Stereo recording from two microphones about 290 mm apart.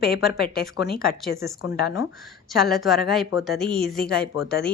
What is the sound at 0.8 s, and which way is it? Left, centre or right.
Speech, left.